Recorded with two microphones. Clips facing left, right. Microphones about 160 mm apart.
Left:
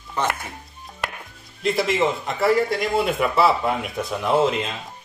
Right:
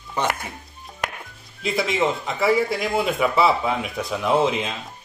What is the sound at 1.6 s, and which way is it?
A man's voice, centre (ahead or behind).